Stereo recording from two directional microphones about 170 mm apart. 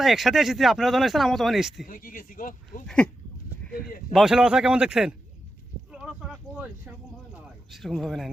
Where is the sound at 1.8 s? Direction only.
55° left (ahead or behind).